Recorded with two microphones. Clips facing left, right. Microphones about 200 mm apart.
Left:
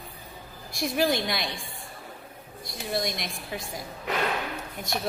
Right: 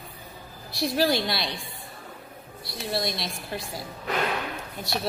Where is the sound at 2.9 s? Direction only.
15° left (ahead or behind).